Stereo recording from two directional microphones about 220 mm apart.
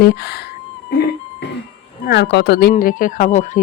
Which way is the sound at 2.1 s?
50° left (ahead or behind).